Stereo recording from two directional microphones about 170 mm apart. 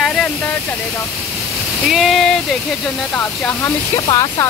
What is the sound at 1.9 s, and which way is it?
Speech, centre (ahead or behind).